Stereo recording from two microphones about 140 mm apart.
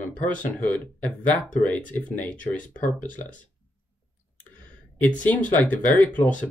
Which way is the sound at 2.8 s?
65° left (ahead or behind).